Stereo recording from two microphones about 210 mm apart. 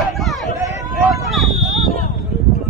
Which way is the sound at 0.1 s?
Centre (ahead or behind).